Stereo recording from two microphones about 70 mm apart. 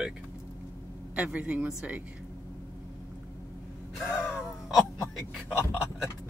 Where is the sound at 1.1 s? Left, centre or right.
Centre.